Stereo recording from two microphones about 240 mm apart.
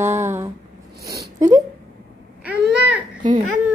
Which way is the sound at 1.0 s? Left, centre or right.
Right.